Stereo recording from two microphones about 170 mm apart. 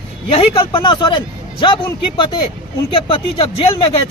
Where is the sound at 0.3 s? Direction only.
30° left (ahead or behind).